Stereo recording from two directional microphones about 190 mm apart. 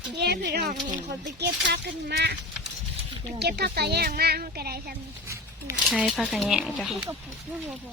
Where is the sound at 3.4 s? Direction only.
60° right (ahead or behind).